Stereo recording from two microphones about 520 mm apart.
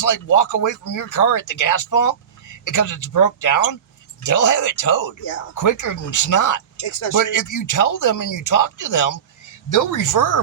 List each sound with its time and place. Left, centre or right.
0.0 s speech: left